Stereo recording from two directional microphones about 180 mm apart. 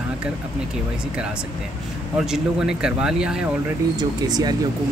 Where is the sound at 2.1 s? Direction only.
5° right (ahead or behind).